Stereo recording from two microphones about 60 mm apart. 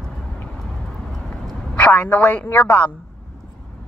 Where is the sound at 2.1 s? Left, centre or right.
Left.